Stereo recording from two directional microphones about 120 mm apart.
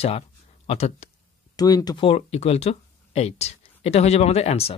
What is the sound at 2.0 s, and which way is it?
Speech, 55° left (ahead or behind).